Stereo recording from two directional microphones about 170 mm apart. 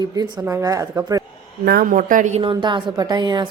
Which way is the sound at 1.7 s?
55° right (ahead or behind).